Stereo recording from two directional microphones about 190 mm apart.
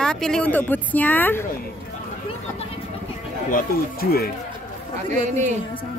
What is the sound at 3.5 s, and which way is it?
Speech, 55° left (ahead or behind).